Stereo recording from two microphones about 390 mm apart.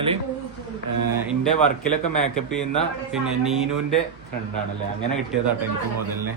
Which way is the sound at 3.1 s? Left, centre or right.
Centre.